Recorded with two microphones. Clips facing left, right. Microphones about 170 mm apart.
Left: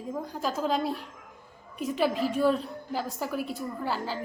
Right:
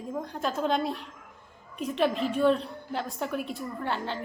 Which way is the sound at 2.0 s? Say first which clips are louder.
Right 1 dB; 5° left (ahead or behind).